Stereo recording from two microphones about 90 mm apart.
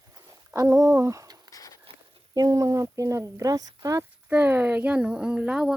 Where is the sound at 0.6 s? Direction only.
35° right (ahead or behind).